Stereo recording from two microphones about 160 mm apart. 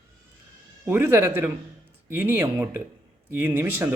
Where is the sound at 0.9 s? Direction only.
15° right (ahead or behind).